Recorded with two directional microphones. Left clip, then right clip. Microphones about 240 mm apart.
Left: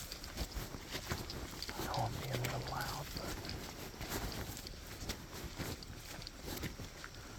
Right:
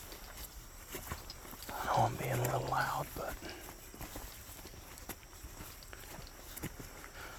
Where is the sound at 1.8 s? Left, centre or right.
Right.